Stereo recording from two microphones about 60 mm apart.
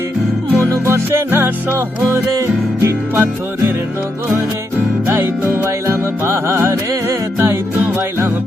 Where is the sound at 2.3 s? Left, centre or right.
Right.